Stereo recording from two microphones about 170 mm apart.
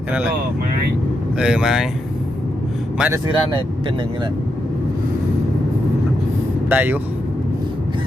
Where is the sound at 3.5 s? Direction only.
30° right (ahead or behind).